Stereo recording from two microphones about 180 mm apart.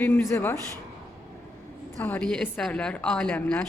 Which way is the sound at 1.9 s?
10° left (ahead or behind).